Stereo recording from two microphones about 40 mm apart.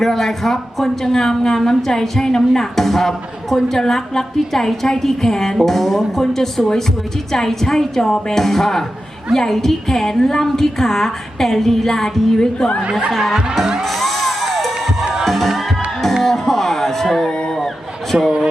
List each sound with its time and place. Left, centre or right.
0.0 s speech: centre
12.4 s speech: centre
13.8 s music: centre
18.1 s speech: right